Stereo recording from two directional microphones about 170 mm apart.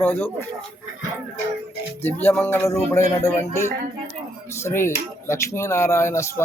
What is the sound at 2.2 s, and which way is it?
Speech, 10° left (ahead or behind).